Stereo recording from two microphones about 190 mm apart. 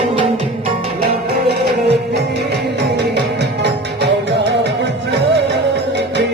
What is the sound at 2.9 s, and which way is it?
Music, 65° right (ahead or behind).